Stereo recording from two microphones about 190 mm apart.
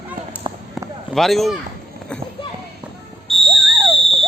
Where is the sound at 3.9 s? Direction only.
30° right (ahead or behind).